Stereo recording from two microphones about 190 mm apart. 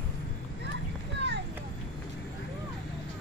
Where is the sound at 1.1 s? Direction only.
65° right (ahead or behind).